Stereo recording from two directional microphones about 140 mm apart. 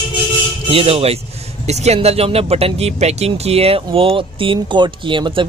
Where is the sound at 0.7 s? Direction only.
45° right (ahead or behind).